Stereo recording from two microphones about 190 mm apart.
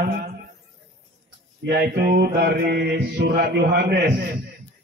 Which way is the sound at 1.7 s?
55° right (ahead or behind).